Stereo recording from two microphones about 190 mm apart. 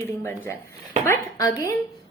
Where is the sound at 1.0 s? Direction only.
15° left (ahead or behind).